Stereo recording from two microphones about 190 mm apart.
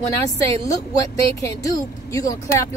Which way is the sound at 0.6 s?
20° left (ahead or behind).